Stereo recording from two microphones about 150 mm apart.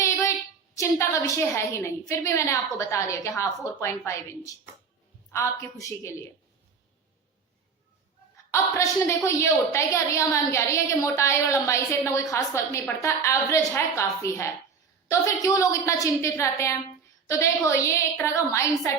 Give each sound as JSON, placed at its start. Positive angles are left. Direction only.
{"t": 0.0, "sound": "child singing", "side_deg": 20}
{"t": 0.8, "sound": "a woman's voice", "side_deg": 20}
{"t": 8.4, "sound": "a woman's voice", "side_deg": 20}